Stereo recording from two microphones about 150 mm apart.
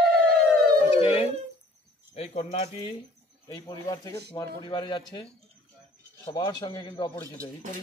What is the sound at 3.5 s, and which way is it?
Speech, 25° left (ahead or behind).